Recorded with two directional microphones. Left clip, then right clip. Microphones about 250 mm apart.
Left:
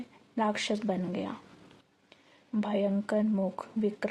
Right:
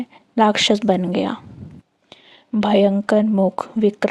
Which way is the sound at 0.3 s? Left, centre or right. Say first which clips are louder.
Right 15 dB; right.